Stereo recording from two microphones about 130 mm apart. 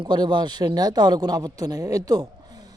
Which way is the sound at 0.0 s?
35° right (ahead or behind).